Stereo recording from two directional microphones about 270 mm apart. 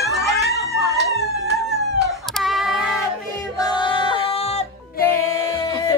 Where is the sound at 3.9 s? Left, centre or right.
Left.